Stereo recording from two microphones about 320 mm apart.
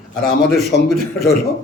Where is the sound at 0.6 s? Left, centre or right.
Left.